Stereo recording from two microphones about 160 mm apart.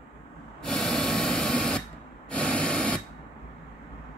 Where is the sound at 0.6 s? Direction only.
Centre (ahead or behind).